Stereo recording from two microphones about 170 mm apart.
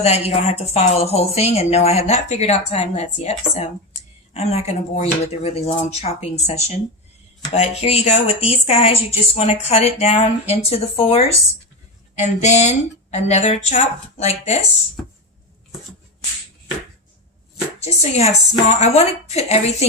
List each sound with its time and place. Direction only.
0.0 s speech: 35° left (ahead or behind)
17.8 s speech: 40° left (ahead or behind)